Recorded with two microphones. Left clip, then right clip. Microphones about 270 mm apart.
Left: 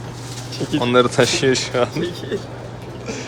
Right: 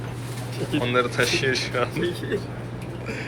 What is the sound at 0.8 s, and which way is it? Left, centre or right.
Speech, centre.